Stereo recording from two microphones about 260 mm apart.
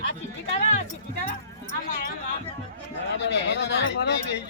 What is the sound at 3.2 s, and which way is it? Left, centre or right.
Speech, left.